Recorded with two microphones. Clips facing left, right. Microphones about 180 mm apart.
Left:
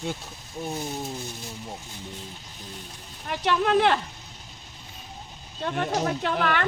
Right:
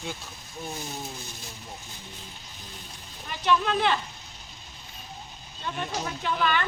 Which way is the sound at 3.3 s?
65° left (ahead or behind).